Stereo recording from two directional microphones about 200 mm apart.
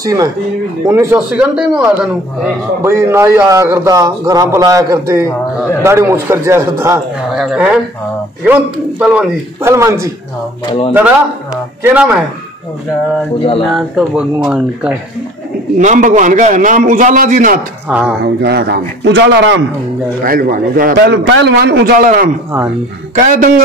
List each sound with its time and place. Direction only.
0.0 s a man's voice: 15° right (ahead or behind)
7.3 s a man's voice: 5° right (ahead or behind)
13.7 s speech: centre (ahead or behind)
15.8 s a man's voice: 35° right (ahead or behind)
17.8 s a man's voice: 5° right (ahead or behind)
18.2 s a man's voice: 55° right (ahead or behind)
20.2 s a man's voice: 45° right (ahead or behind)